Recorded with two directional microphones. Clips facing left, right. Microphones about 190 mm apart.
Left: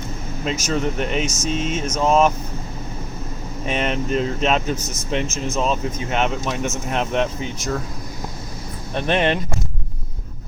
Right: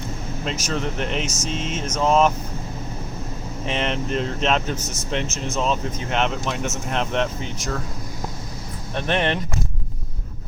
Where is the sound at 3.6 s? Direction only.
10° left (ahead or behind).